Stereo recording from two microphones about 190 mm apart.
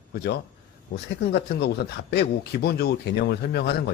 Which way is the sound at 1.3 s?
60° left (ahead or behind).